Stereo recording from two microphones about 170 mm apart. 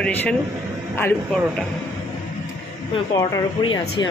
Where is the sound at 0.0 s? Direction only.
5° left (ahead or behind).